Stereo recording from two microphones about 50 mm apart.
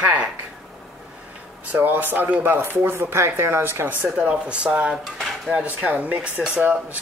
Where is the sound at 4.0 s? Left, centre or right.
Right.